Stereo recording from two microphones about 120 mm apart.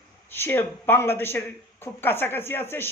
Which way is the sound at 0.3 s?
20° left (ahead or behind).